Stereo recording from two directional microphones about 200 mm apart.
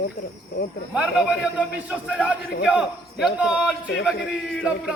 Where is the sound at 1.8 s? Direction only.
5° right (ahead or behind).